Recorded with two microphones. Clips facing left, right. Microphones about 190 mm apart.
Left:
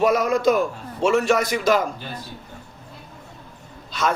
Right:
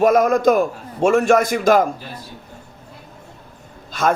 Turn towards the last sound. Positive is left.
turn(degrees=-50)  # may be behind; listen again after turning